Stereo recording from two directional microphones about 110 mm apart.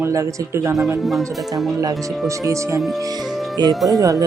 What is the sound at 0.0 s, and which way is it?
Speech, 25° right (ahead or behind).